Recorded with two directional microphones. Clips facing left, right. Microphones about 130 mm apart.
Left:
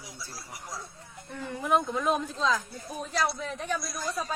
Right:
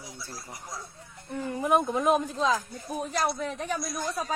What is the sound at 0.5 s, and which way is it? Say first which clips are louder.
Speech: left 3 dB; 10° left (ahead or behind).